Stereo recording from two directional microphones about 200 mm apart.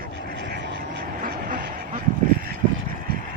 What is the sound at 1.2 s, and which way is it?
Vehicle, 45° right (ahead or behind).